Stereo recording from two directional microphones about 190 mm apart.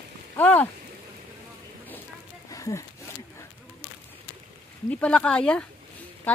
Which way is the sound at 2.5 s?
15° left (ahead or behind).